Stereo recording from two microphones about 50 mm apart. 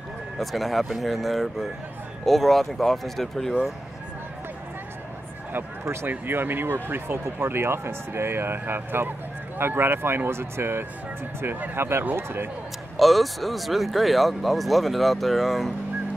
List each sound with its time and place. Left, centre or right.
0.4 s speech: centre
6.0 s speech: right
12.9 s speech: centre